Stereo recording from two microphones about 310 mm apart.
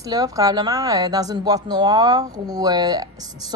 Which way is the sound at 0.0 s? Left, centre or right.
Centre.